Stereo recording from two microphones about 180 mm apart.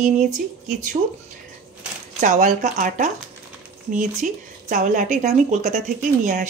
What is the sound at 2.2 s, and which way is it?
Speech, 45° right (ahead or behind).